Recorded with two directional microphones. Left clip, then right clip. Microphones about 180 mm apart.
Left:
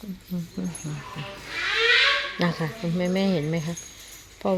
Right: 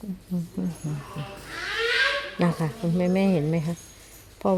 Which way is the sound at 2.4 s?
15° right (ahead or behind).